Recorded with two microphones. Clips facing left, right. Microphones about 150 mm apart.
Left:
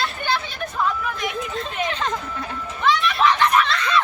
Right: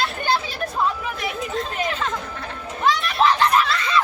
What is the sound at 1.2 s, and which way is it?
Speech, 5° right (ahead or behind).